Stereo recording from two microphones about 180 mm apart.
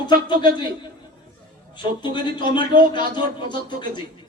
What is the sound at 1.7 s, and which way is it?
A man's voice, 25° left (ahead or behind).